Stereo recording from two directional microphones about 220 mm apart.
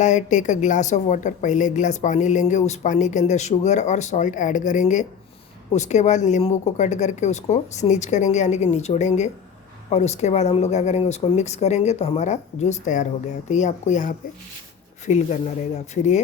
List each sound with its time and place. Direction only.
0.0 s a woman's voice: 35° left (ahead or behind)